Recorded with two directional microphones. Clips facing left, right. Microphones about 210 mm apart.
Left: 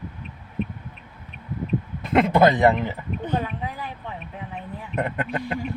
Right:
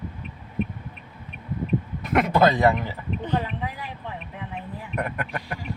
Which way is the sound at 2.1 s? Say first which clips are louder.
Left 2 dB; 25° left (ahead or behind).